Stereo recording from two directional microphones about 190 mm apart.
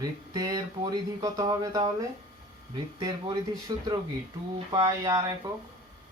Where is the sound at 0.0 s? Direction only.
20° right (ahead or behind).